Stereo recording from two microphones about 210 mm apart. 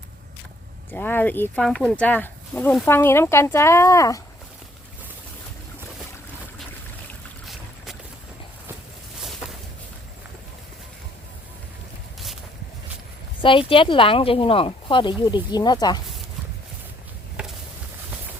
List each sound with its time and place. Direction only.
0.9 s speech: 10° left (ahead or behind)
13.4 s speech: 25° left (ahead or behind)
17.4 s a sound: 5° right (ahead or behind)